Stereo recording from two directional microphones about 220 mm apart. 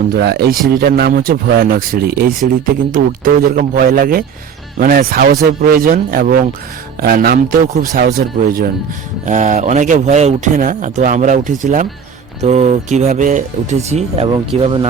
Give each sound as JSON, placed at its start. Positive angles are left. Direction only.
{"t": 0.1, "sound": "speech", "side_deg": -45}
{"t": 13.9, "sound": "speech", "side_deg": -25}